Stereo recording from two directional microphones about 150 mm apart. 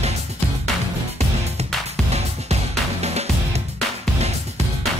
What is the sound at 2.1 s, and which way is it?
Music, 45° right (ahead or behind).